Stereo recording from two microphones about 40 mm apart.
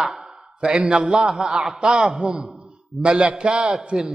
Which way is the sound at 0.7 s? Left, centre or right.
Right.